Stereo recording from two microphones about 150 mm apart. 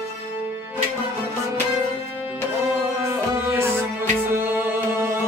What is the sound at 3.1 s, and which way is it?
Music, 15° right (ahead or behind).